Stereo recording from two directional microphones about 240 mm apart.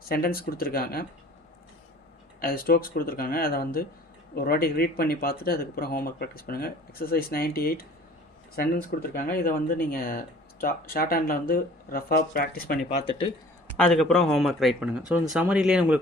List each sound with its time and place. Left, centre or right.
0.1 s speech: left
2.4 s speech: left
13.7 s speech: centre